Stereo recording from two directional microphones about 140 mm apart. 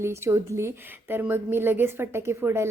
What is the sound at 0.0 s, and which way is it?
A woman's voice, 20° right (ahead or behind).